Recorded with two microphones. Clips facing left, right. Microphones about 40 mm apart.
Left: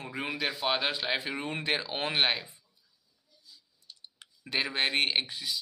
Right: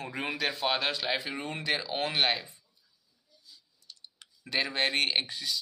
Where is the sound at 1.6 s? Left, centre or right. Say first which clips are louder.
Right 2 dB; left.